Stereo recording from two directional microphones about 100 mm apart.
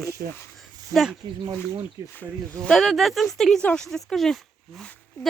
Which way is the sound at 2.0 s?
30° right (ahead or behind).